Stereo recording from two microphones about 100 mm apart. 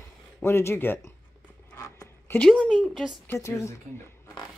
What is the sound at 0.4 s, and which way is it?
Speech, 25° left (ahead or behind).